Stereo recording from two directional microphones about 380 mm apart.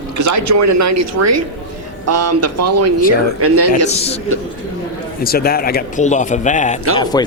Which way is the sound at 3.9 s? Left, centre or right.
Centre.